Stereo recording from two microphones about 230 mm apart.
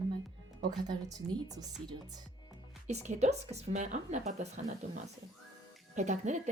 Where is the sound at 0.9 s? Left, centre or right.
Centre.